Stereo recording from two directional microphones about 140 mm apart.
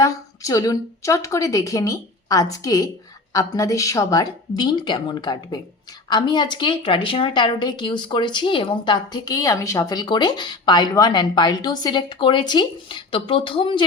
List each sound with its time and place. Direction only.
0.0 s a woman's voice: 25° left (ahead or behind)